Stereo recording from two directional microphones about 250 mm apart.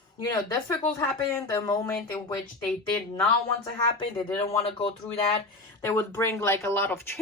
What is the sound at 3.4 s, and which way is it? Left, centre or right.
Speech, centre.